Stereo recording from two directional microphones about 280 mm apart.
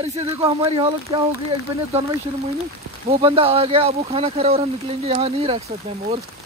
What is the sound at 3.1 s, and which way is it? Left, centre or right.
Speech, centre.